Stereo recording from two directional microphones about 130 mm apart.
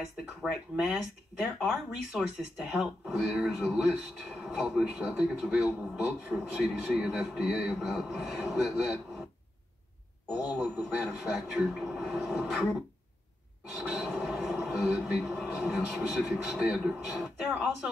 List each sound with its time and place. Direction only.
0.4 s speech: centre (ahead or behind)
10.3 s a man's voice: 30° left (ahead or behind)
10.8 s speech: centre (ahead or behind)
13.7 s speech: centre (ahead or behind)